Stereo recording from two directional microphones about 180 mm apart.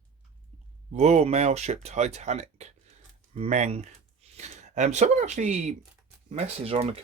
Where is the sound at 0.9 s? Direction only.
35° right (ahead or behind).